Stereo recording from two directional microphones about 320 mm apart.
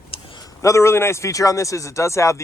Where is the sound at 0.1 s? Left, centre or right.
Centre.